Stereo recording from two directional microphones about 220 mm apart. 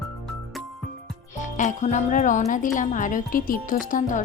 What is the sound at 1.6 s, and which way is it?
Speech, 35° left (ahead or behind).